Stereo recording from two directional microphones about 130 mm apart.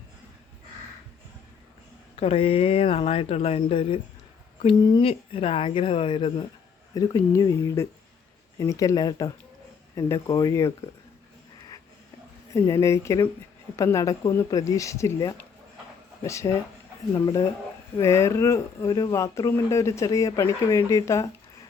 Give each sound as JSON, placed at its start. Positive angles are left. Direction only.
{"t": 2.1, "sound": "speech", "side_deg": 50}
{"t": 4.8, "sound": "speech", "side_deg": 30}
{"t": 5.0, "sound": "speech", "side_deg": 45}
{"t": 6.9, "sound": "speech", "side_deg": 30}
{"t": 12.5, "sound": "speech", "side_deg": 20}